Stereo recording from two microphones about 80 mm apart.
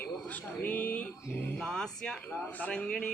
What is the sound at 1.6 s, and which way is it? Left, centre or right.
Speech, centre.